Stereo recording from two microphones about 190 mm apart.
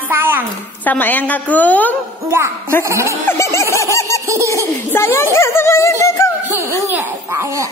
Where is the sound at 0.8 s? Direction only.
10° left (ahead or behind).